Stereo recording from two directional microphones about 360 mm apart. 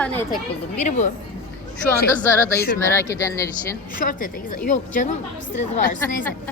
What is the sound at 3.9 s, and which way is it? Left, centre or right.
Speech, left.